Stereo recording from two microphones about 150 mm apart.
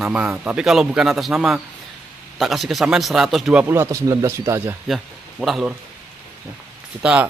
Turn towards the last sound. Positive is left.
turn(degrees=-10)  # may be behind; listen again after turning